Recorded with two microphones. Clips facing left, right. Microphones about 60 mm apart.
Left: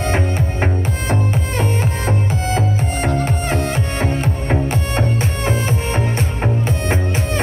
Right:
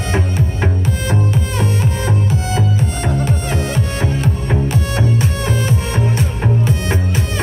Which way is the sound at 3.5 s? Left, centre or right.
Left.